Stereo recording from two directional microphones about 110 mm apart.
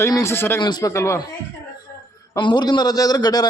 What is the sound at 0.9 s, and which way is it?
Speech, 25° left (ahead or behind).